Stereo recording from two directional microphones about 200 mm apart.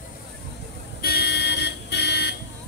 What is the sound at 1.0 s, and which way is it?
Car alarm, 55° left (ahead or behind).